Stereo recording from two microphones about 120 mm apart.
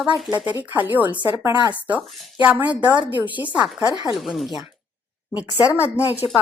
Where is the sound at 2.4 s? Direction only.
15° right (ahead or behind).